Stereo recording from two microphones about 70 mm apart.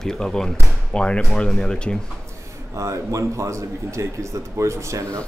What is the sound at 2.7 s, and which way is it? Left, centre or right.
A man's voice, right.